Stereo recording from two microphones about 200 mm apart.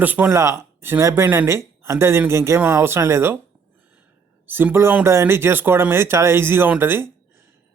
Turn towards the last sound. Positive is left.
turn(degrees=-10)  # may be behind; listen again after turning